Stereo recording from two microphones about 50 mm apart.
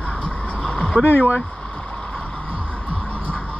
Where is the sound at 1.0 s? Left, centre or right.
Left.